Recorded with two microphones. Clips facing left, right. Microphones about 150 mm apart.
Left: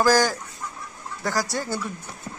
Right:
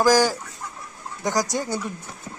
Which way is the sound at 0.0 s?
10° right (ahead or behind).